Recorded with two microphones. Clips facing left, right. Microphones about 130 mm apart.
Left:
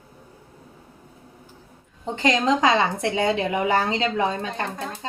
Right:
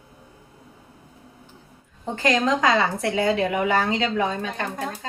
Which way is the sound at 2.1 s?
25° left (ahead or behind).